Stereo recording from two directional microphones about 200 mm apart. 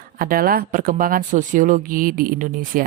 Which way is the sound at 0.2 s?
45° right (ahead or behind).